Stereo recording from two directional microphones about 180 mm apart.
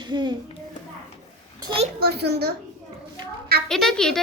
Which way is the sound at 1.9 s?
60° right (ahead or behind).